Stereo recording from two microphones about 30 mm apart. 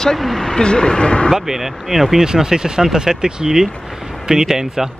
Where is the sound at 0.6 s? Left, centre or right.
Left.